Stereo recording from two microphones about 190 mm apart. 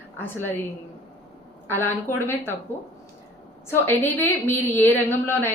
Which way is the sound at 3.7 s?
10° left (ahead or behind).